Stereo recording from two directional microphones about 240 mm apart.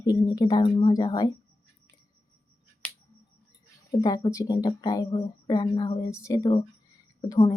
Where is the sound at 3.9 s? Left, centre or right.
Centre.